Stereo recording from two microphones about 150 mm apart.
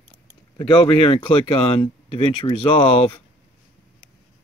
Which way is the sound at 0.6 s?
35° left (ahead or behind).